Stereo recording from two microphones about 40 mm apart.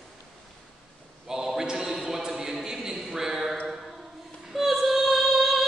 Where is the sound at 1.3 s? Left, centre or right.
Centre.